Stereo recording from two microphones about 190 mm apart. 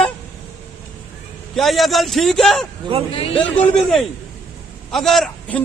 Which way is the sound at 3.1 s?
30° left (ahead or behind).